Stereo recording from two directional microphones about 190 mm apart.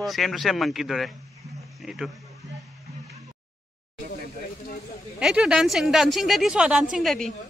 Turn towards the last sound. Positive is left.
turn(degrees=0)  # may be behind; listen again after turning